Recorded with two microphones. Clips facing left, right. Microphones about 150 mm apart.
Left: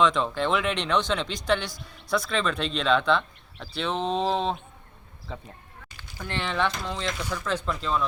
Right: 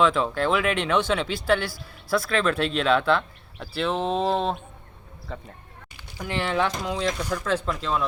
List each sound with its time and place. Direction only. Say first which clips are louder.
0.0 s speech: right 2 dB; 5° right (ahead or behind)
6.0 s speech: right 4 dB; 10° right (ahead or behind)